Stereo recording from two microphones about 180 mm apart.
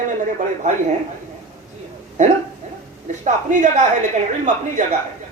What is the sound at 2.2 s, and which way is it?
Speech, 40° right (ahead or behind).